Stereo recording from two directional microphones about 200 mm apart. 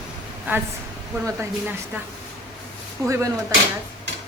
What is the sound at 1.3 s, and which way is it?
Speech, 10° right (ahead or behind).